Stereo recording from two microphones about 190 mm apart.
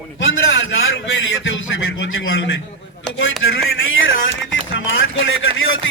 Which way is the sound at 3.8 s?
90° left.